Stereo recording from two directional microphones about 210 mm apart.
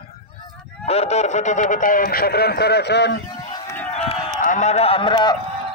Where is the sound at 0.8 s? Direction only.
30° left (ahead or behind); by 3.2 s 55° left (ahead or behind).